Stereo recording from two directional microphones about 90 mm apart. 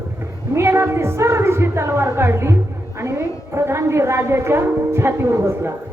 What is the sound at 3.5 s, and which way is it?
A woman's voice, 30° right (ahead or behind).